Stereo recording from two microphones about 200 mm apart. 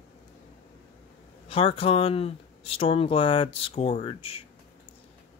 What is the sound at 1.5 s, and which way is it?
Speech, 25° left (ahead or behind).